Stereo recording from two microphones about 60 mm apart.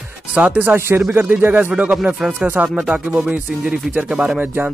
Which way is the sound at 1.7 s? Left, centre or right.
Centre.